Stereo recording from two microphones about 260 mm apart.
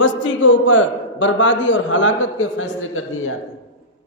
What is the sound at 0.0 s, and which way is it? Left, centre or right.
A man's voice, left.